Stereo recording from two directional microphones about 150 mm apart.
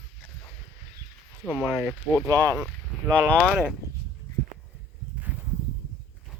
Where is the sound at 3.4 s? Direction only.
5° right (ahead or behind).